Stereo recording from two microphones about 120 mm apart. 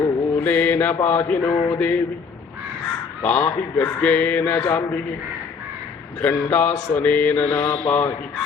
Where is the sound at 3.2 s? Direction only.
10° left (ahead or behind).